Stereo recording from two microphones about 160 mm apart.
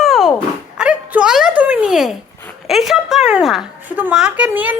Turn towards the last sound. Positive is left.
turn(degrees=-10)  # may be behind; listen again after turning